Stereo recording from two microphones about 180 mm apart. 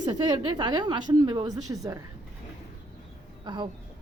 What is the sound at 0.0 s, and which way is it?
A woman's voice, 25° right (ahead or behind).